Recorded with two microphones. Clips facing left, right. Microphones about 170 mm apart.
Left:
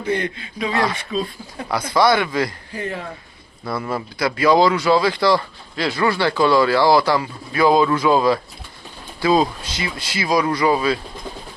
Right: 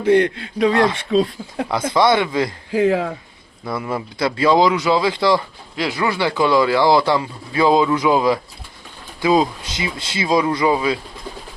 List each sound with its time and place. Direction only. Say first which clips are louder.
0.0 s speech: right 8 dB; 70° right (ahead or behind)
1.1 s speech: right 7 dB; 85° right
1.9 s speech: even; 20° right (ahead or behind)
2.7 s speech: right 13 dB; 90° right
3.7 s speech: right 1 dB; 15° right (ahead or behind)